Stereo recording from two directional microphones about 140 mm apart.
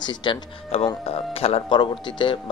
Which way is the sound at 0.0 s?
35° left (ahead or behind).